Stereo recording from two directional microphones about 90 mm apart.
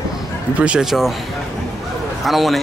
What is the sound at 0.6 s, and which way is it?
Speech, 10° right (ahead or behind).